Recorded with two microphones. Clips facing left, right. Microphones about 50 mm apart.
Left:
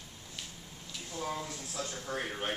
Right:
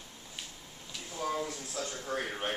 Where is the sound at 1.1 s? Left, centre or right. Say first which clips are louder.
Right 3 dB; centre.